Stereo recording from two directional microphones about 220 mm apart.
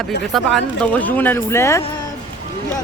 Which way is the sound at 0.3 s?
Centre (ahead or behind).